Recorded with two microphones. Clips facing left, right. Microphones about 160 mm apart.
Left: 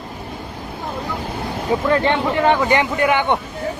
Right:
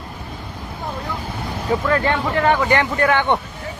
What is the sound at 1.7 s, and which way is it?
Speech, 20° left (ahead or behind).